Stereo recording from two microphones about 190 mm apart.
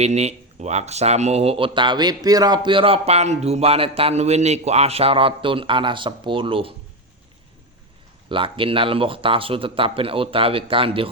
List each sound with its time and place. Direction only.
0.0 s speech: 35° right (ahead or behind)
8.3 s speech: 25° right (ahead or behind)